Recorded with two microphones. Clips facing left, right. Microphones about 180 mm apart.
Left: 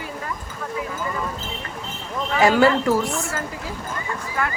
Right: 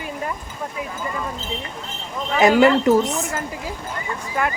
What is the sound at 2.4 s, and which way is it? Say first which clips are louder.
A woman's voice: right 2 dB; 20° right (ahead or behind).